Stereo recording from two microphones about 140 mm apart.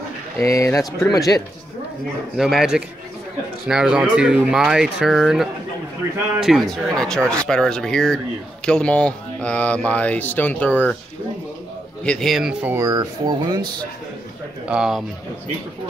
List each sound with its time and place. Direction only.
0.4 s speech: 20° left (ahead or behind)
2.3 s speech: centre (ahead or behind)
12.0 s speech: 5° left (ahead or behind)
12.7 s speech: 25° right (ahead or behind)
14.7 s speech: 5° right (ahead or behind)